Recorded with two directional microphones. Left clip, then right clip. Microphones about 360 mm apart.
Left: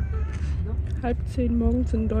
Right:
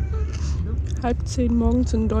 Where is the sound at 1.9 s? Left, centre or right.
Left.